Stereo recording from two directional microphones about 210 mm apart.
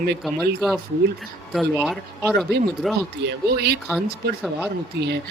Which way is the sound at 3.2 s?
50° right (ahead or behind).